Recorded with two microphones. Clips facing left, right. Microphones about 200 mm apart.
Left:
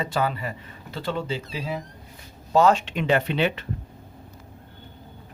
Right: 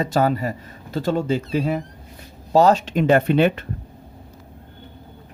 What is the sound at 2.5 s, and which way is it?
Speech, 40° right (ahead or behind).